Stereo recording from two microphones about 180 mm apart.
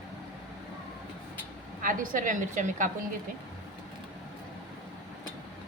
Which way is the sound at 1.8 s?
50° right (ahead or behind).